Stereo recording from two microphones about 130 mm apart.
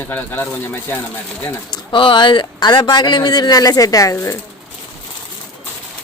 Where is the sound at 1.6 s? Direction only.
35° left (ahead or behind).